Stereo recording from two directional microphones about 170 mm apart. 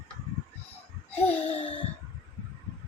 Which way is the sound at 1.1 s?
35° left (ahead or behind).